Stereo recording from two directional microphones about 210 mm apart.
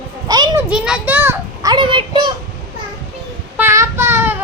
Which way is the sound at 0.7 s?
5° right (ahead or behind).